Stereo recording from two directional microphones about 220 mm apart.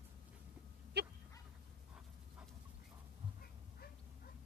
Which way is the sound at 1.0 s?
50° right (ahead or behind).